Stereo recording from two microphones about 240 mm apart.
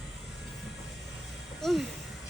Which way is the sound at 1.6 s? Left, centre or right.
Centre.